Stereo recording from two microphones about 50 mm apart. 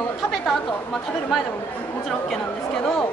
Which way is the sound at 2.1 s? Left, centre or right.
Centre.